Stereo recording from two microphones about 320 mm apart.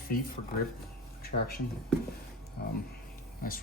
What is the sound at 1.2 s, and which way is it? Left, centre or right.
Speech, left.